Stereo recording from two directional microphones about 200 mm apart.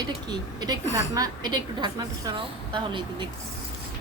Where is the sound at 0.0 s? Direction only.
20° right (ahead or behind).